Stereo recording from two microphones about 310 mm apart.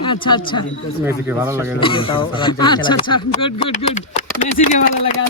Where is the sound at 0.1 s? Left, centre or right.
Centre.